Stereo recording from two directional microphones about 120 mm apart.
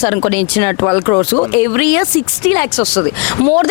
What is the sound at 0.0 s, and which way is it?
Speech, 20° left (ahead or behind).